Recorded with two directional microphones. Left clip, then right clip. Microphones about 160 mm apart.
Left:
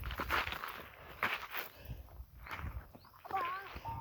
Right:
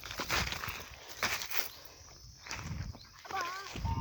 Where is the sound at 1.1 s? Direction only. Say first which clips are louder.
Right 2 dB; 65° right (ahead or behind).